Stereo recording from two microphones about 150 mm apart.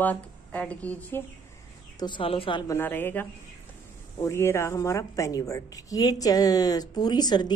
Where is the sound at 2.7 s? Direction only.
15° left (ahead or behind).